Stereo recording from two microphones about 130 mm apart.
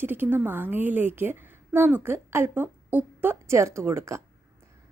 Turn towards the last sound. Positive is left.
turn(degrees=-20)  # may be behind; listen again after turning